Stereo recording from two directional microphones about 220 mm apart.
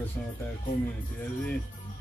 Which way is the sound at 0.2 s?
5° left (ahead or behind).